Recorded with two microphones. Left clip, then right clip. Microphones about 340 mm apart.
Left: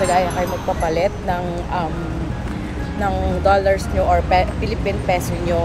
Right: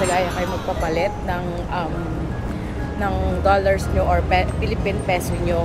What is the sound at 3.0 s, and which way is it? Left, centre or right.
Speech, centre.